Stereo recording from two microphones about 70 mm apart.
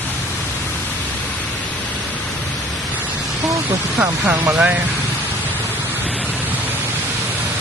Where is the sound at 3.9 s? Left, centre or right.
Right.